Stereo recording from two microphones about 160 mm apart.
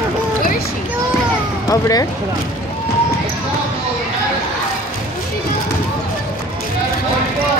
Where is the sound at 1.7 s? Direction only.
20° left (ahead or behind).